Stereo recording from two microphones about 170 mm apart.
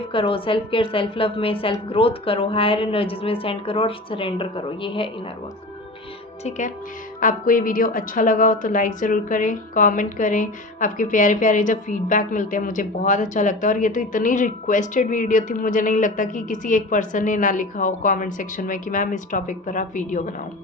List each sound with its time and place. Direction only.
0.1 s a woman's voice: 30° left (ahead or behind)
6.4 s a woman's voice: 45° left (ahead or behind)